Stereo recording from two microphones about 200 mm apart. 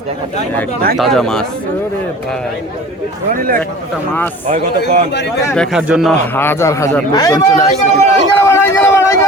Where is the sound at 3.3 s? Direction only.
45° right (ahead or behind).